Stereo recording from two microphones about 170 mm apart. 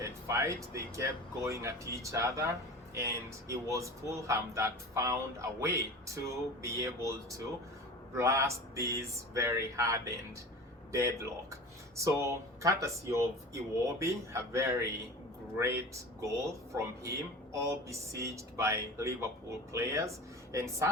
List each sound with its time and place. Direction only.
0.0 s speech: 15° right (ahead or behind)